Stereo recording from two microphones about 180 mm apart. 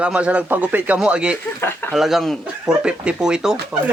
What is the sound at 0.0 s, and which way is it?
Speech, 5° right (ahead or behind).